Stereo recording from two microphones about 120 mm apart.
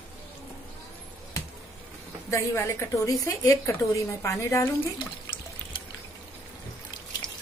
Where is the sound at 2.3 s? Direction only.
20° left (ahead or behind).